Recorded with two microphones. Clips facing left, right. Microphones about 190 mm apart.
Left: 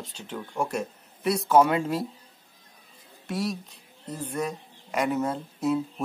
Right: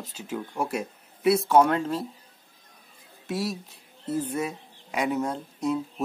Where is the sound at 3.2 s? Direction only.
Centre (ahead or behind).